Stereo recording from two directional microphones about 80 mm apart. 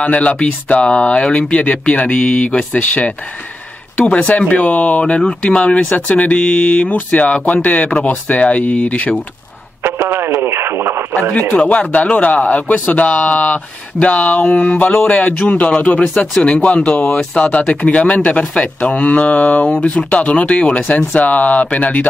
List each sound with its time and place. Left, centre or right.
0.0 s speech: centre
9.8 s radio: right
11.7 s speech: centre